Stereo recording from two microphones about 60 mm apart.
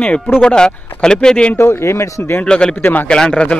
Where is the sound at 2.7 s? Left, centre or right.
Left.